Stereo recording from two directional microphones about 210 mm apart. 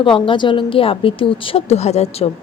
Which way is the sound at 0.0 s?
25° left (ahead or behind).